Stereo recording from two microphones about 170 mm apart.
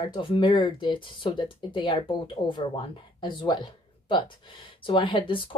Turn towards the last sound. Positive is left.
turn(degrees=30)  # may be behind; listen again after turning